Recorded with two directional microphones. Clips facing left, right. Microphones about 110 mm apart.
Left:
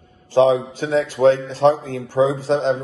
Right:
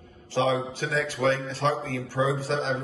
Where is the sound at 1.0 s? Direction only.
25° left (ahead or behind).